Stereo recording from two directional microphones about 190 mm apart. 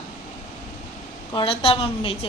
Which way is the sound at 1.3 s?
25° left (ahead or behind).